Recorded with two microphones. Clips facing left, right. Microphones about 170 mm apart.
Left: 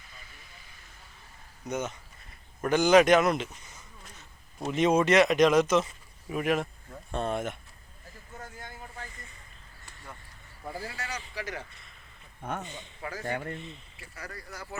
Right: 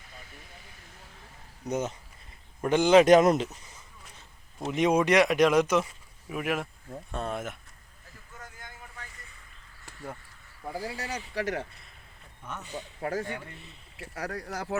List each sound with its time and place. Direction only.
1.6 s speech: 35° right (ahead or behind)
3.1 s speech: 40° right (ahead or behind)
4.7 s speech: 15° right (ahead or behind)
8.3 s vehicle: 30° left (ahead or behind)
10.8 s speech: 15° right (ahead or behind)
11.3 s speech: 65° right (ahead or behind)
12.4 s speech: 55° left (ahead or behind)
13.0 s speech: 60° right (ahead or behind)
13.2 s speech: 65° left (ahead or behind)
14.0 s speech: 75° right (ahead or behind)